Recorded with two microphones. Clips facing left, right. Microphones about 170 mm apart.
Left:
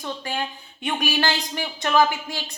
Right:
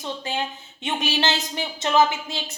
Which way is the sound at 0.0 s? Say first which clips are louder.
Right 1 dB; 20° right (ahead or behind).